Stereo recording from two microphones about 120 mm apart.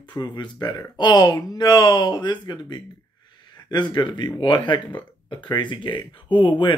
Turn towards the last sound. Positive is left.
turn(degrees=45)  # may be behind; listen again after turning